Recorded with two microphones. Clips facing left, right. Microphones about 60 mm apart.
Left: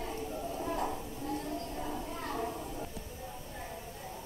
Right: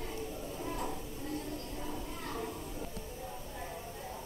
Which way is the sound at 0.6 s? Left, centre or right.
Left.